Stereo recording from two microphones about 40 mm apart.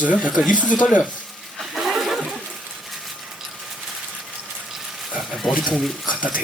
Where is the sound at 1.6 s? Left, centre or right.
Centre.